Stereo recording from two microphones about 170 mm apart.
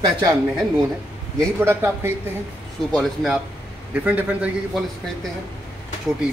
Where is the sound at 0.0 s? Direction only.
20° right (ahead or behind).